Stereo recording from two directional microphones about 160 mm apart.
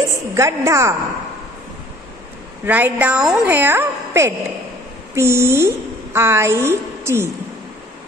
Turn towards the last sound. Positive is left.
turn(degrees=-15)  # may be behind; listen again after turning